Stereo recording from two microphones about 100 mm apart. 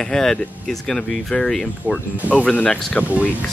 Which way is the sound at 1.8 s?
20° left (ahead or behind).